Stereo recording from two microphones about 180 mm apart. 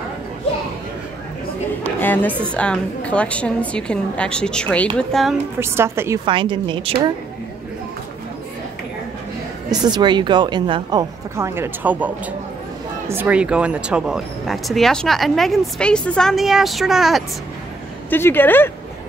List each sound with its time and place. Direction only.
2.0 s speech: 10° left (ahead or behind)
5.6 s a woman's voice: 15° right (ahead or behind)
6.2 s speech: 25° right (ahead or behind)
9.7 s speech: 25° right (ahead or behind)
13.1 s speech: 10° right (ahead or behind)
18.1 s speech: 10° left (ahead or behind)